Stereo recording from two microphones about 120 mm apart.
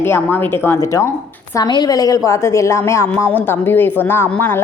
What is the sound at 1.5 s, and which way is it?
A woman's voice, 35° left (ahead or behind).